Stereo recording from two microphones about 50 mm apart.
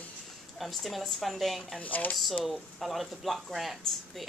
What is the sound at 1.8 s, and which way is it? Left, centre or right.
Speech, left.